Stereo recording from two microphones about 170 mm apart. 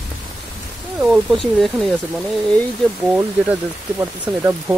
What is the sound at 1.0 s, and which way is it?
Speech, centre (ahead or behind).